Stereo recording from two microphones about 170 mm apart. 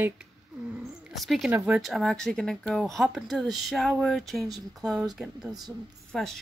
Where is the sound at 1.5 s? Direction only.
5° right (ahead or behind).